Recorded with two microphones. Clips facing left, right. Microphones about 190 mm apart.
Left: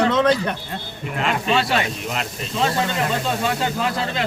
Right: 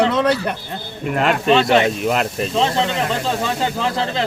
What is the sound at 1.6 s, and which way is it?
Speech, 20° right (ahead or behind).